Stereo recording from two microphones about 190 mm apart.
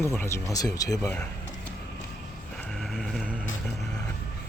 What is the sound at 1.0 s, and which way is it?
Speech, 5° left (ahead or behind).